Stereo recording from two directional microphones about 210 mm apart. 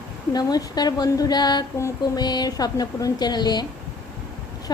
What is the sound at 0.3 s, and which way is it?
Female singing, 20° left (ahead or behind).